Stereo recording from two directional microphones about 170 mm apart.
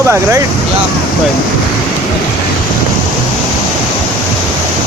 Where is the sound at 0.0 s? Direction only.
15° right (ahead or behind).